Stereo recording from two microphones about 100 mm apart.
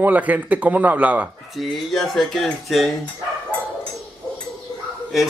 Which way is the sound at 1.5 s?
Centre (ahead or behind).